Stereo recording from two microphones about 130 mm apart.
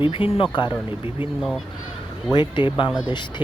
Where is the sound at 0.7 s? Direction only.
15° right (ahead or behind).